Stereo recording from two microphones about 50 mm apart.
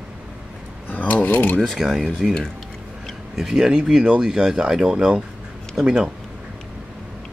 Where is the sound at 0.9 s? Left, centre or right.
Left.